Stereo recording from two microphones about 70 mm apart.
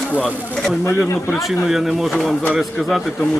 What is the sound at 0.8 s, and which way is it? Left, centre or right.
Speech, left.